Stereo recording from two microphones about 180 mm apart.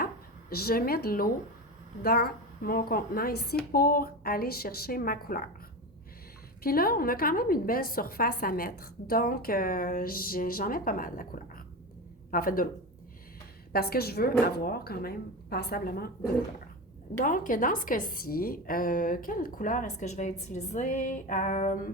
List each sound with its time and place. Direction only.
0.5 s speech: 55° left (ahead or behind)
6.6 s a woman's voice: 55° left (ahead or behind)
13.7 s a woman's voice: 60° left (ahead or behind)